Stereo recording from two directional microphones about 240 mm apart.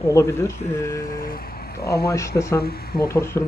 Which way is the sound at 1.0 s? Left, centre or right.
Left.